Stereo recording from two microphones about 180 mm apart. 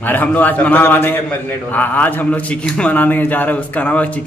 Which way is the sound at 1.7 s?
10° left (ahead or behind).